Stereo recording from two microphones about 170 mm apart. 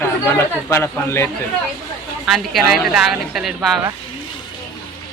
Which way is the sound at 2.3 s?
Centre (ahead or behind).